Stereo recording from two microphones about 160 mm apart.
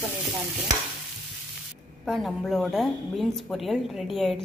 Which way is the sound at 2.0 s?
Centre (ahead or behind).